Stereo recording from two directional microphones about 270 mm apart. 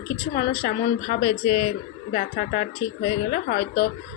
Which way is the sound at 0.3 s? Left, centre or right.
Left.